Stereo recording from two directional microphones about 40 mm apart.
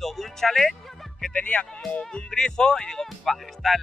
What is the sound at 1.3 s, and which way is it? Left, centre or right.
Speech, left.